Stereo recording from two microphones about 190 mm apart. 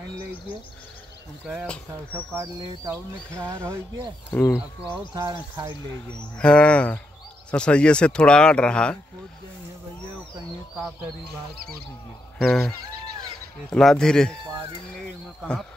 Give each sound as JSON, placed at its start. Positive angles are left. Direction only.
{"t": 1.4, "sound": "speech", "side_deg": -5}
{"t": 2.1, "sound": "speech", "side_deg": -15}
{"t": 4.3, "sound": "speech", "side_deg": 10}
{"t": 5.1, "sound": "speech", "side_deg": -20}
{"t": 6.3, "sound": "speech", "side_deg": 5}
{"t": 12.4, "sound": "speech", "side_deg": 5}